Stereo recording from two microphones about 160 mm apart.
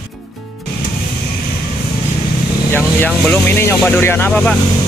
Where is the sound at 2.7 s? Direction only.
10° left (ahead or behind).